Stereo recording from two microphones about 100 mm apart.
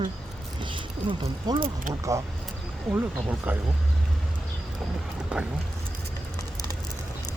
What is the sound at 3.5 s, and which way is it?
Speech, 15° right (ahead or behind).